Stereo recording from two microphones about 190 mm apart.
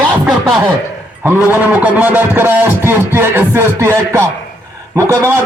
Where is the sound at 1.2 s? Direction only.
10° right (ahead or behind).